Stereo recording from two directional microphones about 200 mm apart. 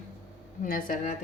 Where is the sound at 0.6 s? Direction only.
45° left (ahead or behind).